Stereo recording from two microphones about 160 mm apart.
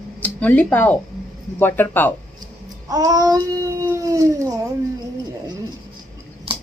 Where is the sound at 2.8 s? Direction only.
25° right (ahead or behind).